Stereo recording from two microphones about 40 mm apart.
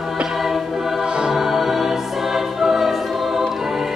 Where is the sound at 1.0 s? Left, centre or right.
Right.